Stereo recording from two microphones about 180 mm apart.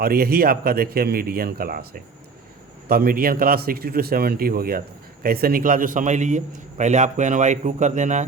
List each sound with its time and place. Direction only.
0.0 s a man's voice: 55° right (ahead or behind)